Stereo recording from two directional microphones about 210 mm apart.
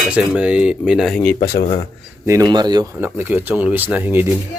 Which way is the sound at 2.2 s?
15° right (ahead or behind).